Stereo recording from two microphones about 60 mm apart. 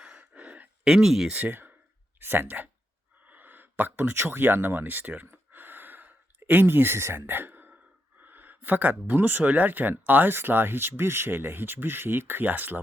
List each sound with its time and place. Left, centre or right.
0.0 s gasp: centre
0.9 s speech: centre
1.3 s speech: right
3.2 s a sound: right
8.2 s speech: right